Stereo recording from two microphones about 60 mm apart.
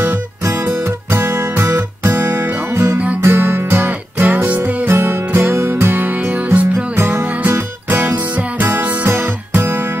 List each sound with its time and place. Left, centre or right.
0.0 s music: right
3.2 s music: right
5.9 s music: right
8.0 s music: right